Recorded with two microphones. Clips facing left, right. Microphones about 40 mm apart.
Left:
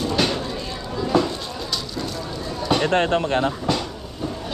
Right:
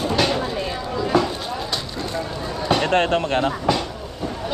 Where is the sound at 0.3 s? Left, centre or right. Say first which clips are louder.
Right 4 dB; right.